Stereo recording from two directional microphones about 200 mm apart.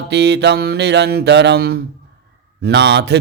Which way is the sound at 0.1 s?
60° right (ahead or behind).